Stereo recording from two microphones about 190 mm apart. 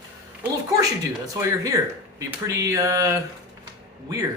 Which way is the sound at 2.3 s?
15° right (ahead or behind).